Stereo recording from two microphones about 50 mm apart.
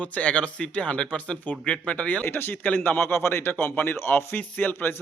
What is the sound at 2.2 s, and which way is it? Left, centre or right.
A man's voice, left.